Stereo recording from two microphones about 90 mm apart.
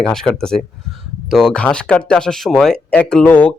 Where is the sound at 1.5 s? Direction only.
10° left (ahead or behind).